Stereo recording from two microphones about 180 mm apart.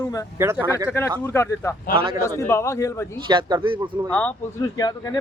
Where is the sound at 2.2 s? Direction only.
15° left (ahead or behind).